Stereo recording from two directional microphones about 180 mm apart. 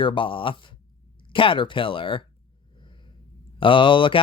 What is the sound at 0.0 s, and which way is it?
Speech, 30° left (ahead or behind).